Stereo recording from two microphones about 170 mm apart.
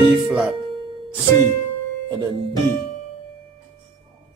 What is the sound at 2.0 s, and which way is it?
Speech, 25° right (ahead or behind).